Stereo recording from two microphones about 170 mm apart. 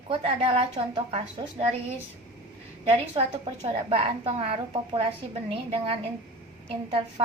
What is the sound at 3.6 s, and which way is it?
A woman's voice, 40° right (ahead or behind).